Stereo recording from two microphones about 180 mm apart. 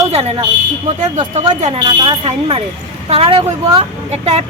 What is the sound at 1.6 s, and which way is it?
Speech, 30° right (ahead or behind).